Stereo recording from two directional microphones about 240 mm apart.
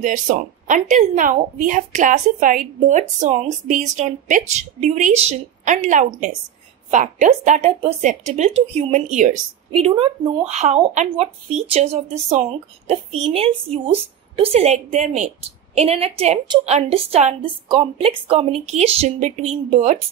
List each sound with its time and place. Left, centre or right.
0.0 s a woman's voice: right